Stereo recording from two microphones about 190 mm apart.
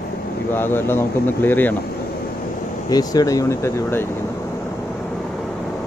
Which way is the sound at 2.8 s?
20° left (ahead or behind).